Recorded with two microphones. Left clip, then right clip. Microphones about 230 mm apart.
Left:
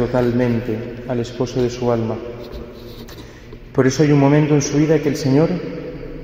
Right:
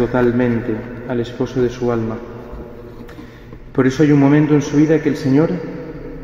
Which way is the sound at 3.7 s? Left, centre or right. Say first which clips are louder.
Right 1 dB; left.